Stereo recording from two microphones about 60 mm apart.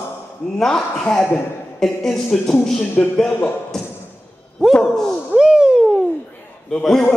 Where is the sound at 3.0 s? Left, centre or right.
Centre.